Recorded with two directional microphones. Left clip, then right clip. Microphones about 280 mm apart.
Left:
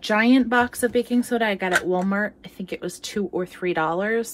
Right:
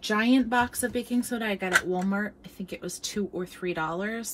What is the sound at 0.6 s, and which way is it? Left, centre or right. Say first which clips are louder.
Speech: left 6 dB; centre.